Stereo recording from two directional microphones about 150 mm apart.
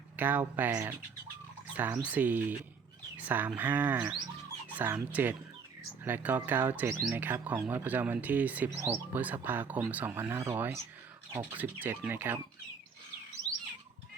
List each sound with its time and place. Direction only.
0.2 s speech: 10° right (ahead or behind)